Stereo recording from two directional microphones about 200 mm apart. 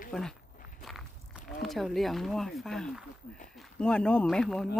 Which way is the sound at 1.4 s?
Centre (ahead or behind).